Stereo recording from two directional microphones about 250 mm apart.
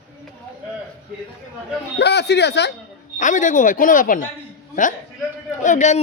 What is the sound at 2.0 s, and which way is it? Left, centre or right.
Speech, left.